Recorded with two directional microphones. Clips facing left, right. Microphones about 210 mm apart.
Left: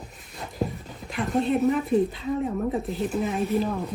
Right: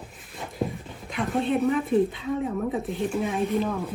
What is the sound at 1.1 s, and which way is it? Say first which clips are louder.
A woman's voice: left 1 dB; centre (ahead or behind).